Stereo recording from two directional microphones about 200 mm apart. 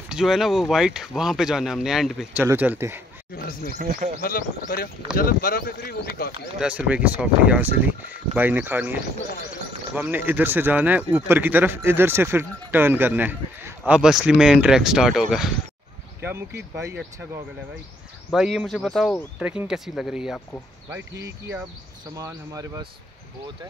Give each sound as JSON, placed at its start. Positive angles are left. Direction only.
{"t": 0.1, "sound": "a man's voice", "side_deg": 0}
{"t": 4.2, "sound": "speech", "side_deg": 45}
{"t": 6.6, "sound": "a man's voice", "side_deg": -5}
{"t": 22.1, "sound": "a man's voice", "side_deg": -15}